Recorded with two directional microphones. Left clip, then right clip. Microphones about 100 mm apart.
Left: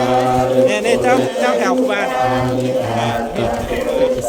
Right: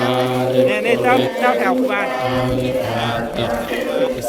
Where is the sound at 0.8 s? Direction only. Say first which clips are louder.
Left 1 dB; 40° left (ahead or behind).